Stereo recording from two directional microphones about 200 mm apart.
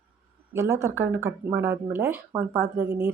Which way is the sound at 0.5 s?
15° right (ahead or behind).